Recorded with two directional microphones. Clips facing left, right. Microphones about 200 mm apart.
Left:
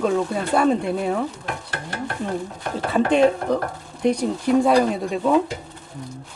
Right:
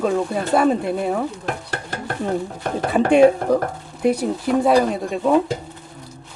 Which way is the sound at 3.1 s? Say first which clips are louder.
Right 5 dB; 10° right (ahead or behind).